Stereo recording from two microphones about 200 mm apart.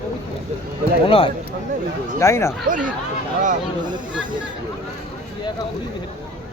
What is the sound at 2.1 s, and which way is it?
Speech, 15° left (ahead or behind).